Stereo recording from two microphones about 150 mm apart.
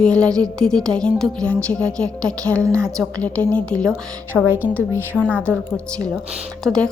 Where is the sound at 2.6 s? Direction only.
20° right (ahead or behind).